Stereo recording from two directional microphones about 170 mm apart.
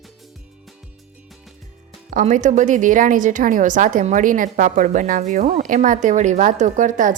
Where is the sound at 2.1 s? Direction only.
50° right (ahead or behind).